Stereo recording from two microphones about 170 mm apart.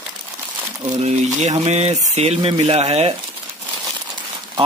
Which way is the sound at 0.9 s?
40° right (ahead or behind).